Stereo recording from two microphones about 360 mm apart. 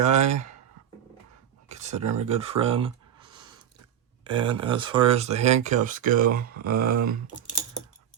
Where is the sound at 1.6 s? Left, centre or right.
Centre.